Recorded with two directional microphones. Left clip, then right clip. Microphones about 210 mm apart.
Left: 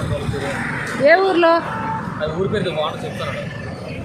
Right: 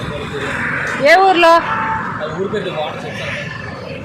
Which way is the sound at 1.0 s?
20° left (ahead or behind).